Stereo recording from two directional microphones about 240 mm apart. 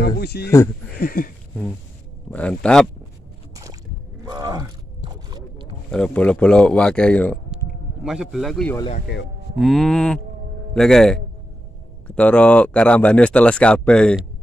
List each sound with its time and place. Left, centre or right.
0.2 s a sound: left
2.3 s speech: centre
4.2 s a sound: centre
5.9 s speech: centre
9.1 s speech: left
9.6 s speech: centre